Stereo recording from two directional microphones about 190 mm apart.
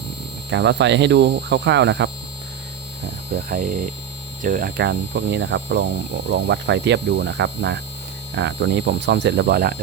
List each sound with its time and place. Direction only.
0.5 s speech: 65° right (ahead or behind)
3.3 s speech: 45° right (ahead or behind)